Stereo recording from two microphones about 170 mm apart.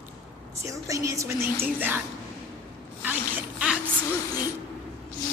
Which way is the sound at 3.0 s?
10° right (ahead or behind).